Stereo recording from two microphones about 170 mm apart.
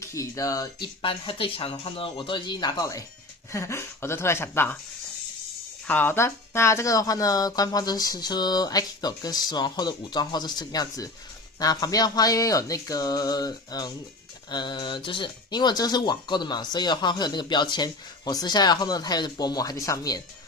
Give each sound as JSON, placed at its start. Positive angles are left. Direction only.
{"t": 0.0, "sound": "speech", "side_deg": 20}
{"t": 5.9, "sound": "speech", "side_deg": 10}